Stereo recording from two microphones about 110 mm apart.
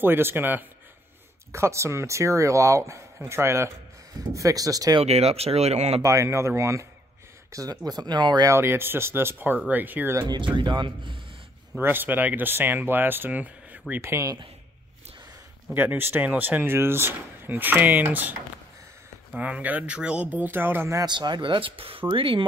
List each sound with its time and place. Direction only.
0.0 s speech: 20° right (ahead or behind)
5.0 s speech: 70° right (ahead or behind)
6.0 s speech: 25° right (ahead or behind)
8.5 s speech: 20° right (ahead or behind)
10.2 s speech: 40° right (ahead or behind)
11.8 s speech: 20° right (ahead or behind)
15.7 s speech: 15° right (ahead or behind)
19.3 s speech: 10° right (ahead or behind)
21.0 s speech: 40° right (ahead or behind)